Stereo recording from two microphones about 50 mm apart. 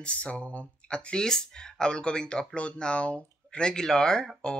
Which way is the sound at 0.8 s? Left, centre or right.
Centre.